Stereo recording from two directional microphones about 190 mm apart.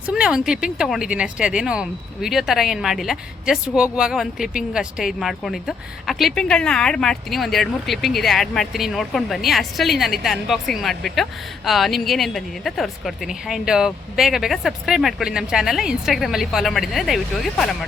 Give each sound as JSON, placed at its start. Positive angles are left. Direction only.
{"t": 0.0, "sound": "speech", "side_deg": -5}